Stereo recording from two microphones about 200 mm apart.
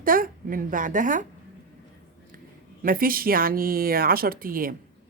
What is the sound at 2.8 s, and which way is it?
Speech, 45° right (ahead or behind).